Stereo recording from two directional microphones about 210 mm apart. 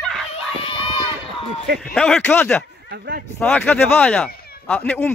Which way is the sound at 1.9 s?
5° left (ahead or behind).